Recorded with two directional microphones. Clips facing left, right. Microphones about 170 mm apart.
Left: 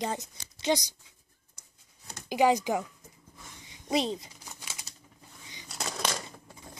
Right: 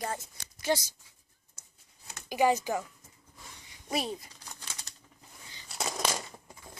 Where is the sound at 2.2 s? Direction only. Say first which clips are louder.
Left 2 dB; 15° left (ahead or behind).